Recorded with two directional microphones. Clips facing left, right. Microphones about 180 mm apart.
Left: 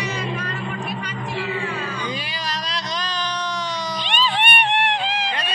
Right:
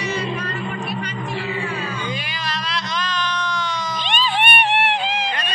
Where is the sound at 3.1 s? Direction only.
35° left (ahead or behind).